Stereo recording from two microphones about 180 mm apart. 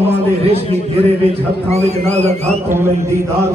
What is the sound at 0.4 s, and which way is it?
A man's voice, 35° right (ahead or behind).